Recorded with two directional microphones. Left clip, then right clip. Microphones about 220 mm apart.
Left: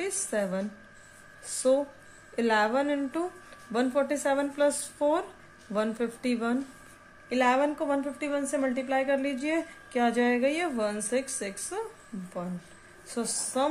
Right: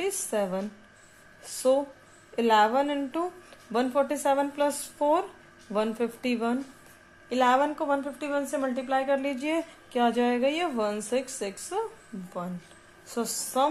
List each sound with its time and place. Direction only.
0.0 s a woman's voice: 10° right (ahead or behind)
13.1 s a woman's voice: 5° right (ahead or behind)